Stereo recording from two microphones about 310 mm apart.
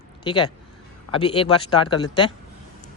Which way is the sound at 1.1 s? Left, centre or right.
Centre.